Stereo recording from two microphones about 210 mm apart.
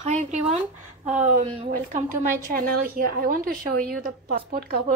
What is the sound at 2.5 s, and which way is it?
Speech, 45° right (ahead or behind).